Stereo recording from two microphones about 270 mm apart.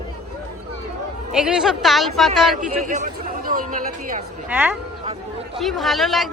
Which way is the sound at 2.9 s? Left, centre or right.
Right.